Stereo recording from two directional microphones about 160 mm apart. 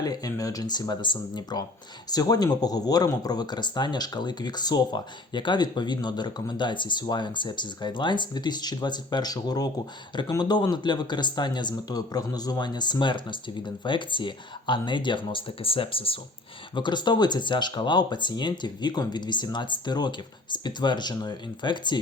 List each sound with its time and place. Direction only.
0.0 s speech: 25° left (ahead or behind)